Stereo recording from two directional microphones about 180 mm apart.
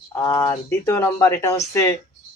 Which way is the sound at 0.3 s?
15° left (ahead or behind).